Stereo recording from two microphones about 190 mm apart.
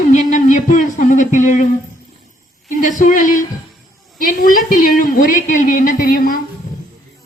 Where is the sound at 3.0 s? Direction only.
45° left (ahead or behind).